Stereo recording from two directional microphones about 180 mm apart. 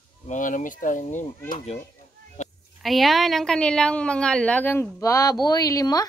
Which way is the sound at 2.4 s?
40° left (ahead or behind).